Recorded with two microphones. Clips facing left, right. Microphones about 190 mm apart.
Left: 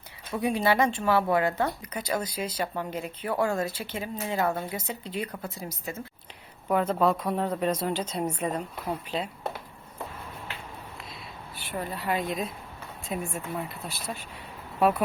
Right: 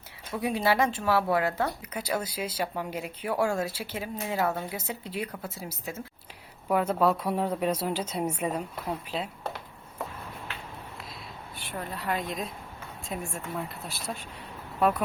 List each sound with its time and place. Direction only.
0.3 s speech: centre (ahead or behind)
11.5 s speech: centre (ahead or behind)